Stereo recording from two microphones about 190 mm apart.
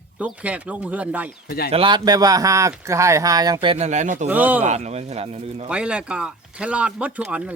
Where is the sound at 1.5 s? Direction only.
55° left (ahead or behind).